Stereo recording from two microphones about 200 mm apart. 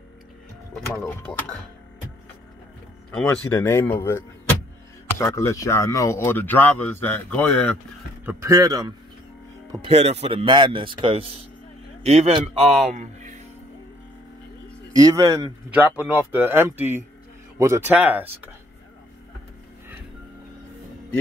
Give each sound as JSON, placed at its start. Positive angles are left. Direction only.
{"t": 0.7, "sound": "speech", "side_deg": 5}
{"t": 3.4, "sound": "speech", "side_deg": 15}
{"t": 8.3, "sound": "a man's voice", "side_deg": -15}
{"t": 14.9, "sound": "speech", "side_deg": -15}